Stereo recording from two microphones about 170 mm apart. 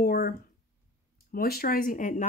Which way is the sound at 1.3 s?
60° left (ahead or behind).